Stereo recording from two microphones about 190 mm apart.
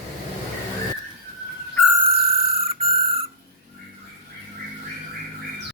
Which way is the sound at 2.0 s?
30° right (ahead or behind).